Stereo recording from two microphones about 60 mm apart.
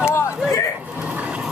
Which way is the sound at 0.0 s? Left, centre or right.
Left.